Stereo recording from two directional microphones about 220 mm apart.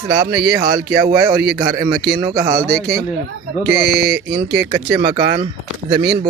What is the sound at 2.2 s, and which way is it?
Speech, 15° right (ahead or behind).